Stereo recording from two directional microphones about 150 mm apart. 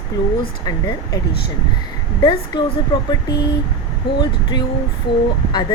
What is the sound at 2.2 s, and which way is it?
Speech, 30° left (ahead or behind).